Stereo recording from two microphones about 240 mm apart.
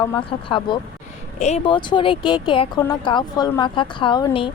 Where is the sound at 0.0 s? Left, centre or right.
Centre.